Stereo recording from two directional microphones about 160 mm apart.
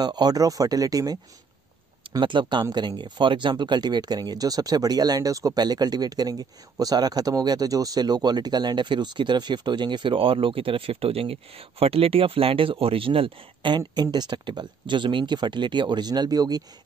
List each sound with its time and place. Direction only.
0.0 s speech: 25° right (ahead or behind)
2.1 s speech: 30° right (ahead or behind)